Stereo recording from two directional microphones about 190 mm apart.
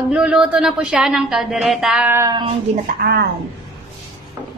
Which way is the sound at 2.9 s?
55° right (ahead or behind).